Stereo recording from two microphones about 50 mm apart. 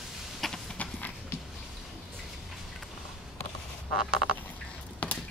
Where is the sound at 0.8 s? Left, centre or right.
Left.